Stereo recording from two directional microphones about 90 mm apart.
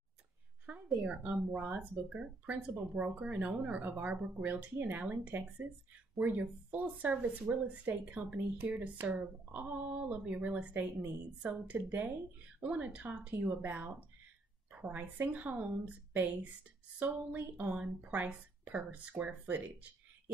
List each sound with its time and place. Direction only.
0.8 s a woman's voice: 5° right (ahead or behind)